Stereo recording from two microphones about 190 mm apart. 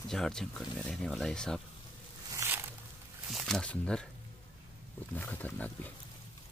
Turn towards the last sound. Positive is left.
turn(degrees=10)  # may be behind; listen again after turning